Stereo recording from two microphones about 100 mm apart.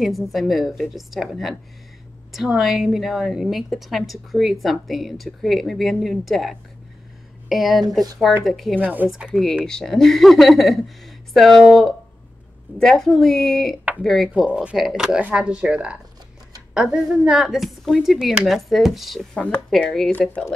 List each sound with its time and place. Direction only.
0.0 s a woman's voice: centre (ahead or behind)
8.7 s speech: 15° right (ahead or behind)
9.1 s a woman's voice: 5° right (ahead or behind)
19.3 s a woman's voice: 10° left (ahead or behind)
20.1 s speech: 15° left (ahead or behind)